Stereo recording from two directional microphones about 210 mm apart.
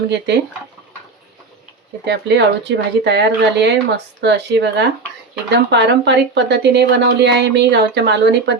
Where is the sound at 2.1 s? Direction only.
55° right (ahead or behind).